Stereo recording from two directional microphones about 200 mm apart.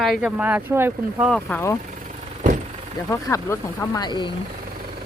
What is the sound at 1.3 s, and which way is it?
Speech, 5° left (ahead or behind).